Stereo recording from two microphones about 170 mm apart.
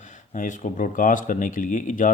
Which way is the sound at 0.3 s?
50° left (ahead or behind).